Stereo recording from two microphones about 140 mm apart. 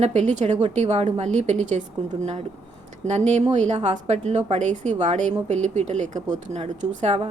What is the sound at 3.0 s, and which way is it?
A woman's voice, 55° right (ahead or behind).